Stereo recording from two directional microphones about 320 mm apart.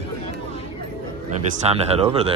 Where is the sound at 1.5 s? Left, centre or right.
Centre.